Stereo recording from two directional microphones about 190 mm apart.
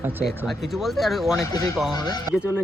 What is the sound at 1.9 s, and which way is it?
Speech, 20° left (ahead or behind).